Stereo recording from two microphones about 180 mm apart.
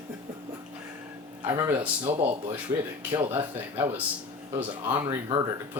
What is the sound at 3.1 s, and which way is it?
Speech, 30° right (ahead or behind).